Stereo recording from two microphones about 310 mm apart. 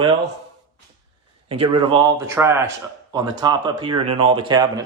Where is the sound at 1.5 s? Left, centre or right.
Centre.